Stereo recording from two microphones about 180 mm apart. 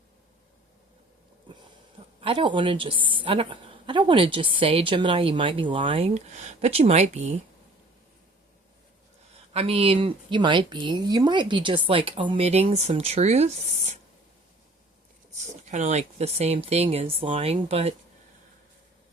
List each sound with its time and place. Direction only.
2.2 s a woman's voice: 30° right (ahead or behind)
9.5 s speech: 35° right (ahead or behind)
15.6 s speech: 40° right (ahead or behind)